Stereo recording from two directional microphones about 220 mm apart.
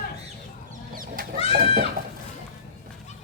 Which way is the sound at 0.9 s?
40° right (ahead or behind).